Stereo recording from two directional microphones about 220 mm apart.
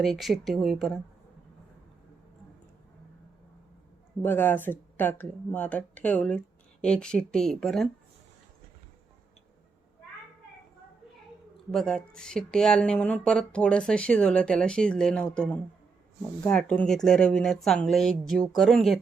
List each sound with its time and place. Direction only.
0.0 s speech: centre (ahead or behind)
4.2 s speech: 10° left (ahead or behind)
11.7 s speech: 5° left (ahead or behind)